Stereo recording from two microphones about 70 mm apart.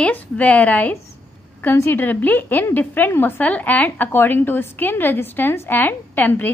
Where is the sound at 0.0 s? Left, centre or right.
Left.